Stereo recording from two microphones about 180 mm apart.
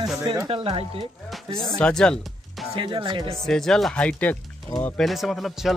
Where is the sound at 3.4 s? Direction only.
5° left (ahead or behind).